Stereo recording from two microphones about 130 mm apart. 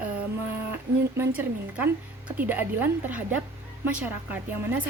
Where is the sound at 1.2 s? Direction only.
15° right (ahead or behind).